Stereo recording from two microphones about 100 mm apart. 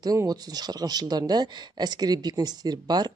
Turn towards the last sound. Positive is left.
turn(degrees=-45)  # may be behind; listen again after turning